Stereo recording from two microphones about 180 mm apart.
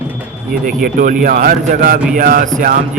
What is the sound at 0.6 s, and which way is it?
A man's voice, 50° right (ahead or behind).